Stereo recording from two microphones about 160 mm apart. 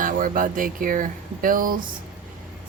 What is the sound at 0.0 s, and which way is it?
Speech, 55° right (ahead or behind).